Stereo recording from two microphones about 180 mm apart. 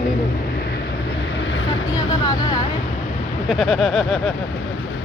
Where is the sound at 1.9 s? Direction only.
20° left (ahead or behind).